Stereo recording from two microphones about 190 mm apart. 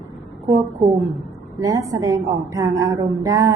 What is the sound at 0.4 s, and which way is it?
A woman's voice, 15° right (ahead or behind).